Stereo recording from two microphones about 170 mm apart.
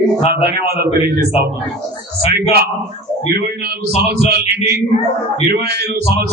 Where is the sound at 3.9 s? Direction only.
70° right (ahead or behind).